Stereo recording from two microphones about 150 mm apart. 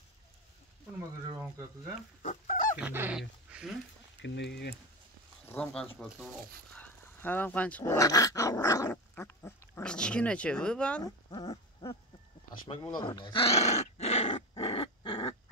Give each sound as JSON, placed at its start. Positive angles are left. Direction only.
{"t": 2.2, "sound": "goose", "side_deg": 60}
{"t": 2.8, "sound": "dog", "side_deg": -10}
{"t": 3.2, "sound": "speech", "side_deg": -5}
{"t": 5.5, "sound": "speech", "side_deg": 5}
{"t": 8.9, "sound": "speech", "side_deg": 10}
{"t": 11.1, "sound": "a sound", "side_deg": 25}
{"t": 12.9, "sound": "dog", "side_deg": 30}